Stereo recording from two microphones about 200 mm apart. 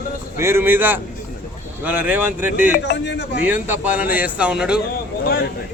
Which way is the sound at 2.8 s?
60° left (ahead or behind).